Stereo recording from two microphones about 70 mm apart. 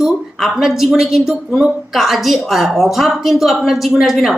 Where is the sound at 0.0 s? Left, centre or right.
Centre.